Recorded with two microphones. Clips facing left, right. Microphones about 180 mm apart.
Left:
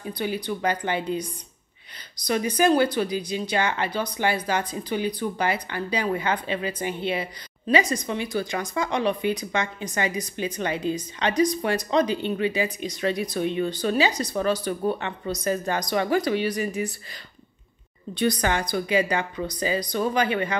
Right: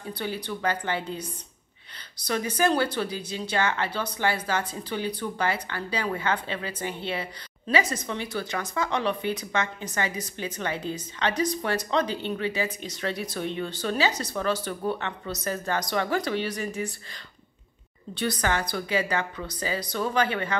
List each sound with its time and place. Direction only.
0.0 s speech: 15° left (ahead or behind)
2.2 s speech: 15° left (ahead or behind)
18.1 s speech: 15° left (ahead or behind)